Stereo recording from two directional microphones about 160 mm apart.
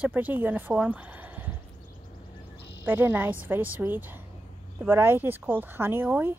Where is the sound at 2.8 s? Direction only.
10° right (ahead or behind).